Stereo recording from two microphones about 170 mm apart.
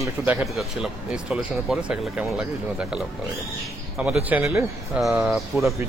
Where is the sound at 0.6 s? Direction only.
Centre (ahead or behind).